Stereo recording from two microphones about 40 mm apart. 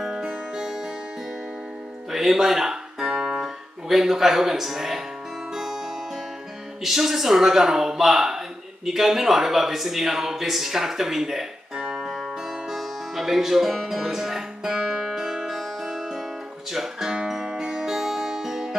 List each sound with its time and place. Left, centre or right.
0.0 s music: centre
2.0 s music: centre
3.1 s guitar: right
3.9 s a man's voice: centre
5.5 s music: centre
6.8 s a man's voice: centre
11.7 s music: right; by 16.3 s centre
16.7 s guitar: centre